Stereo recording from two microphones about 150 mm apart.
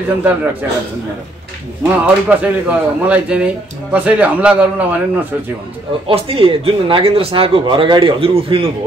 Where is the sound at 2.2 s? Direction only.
10° right (ahead or behind).